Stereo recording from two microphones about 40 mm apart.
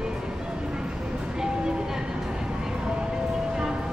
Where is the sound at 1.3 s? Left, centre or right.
Centre.